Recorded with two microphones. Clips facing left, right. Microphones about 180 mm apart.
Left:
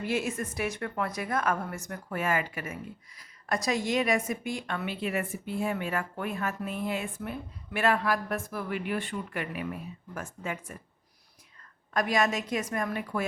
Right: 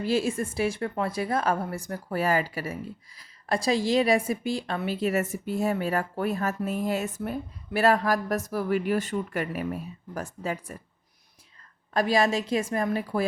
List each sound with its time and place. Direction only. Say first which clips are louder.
0.0 s a woman's voice: right 5 dB; 30° right (ahead or behind)
11.9 s a woman's voice: right 4 dB; 30° right (ahead or behind)